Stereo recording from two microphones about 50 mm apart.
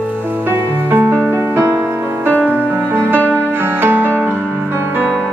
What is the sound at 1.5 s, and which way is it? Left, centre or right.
Music, right.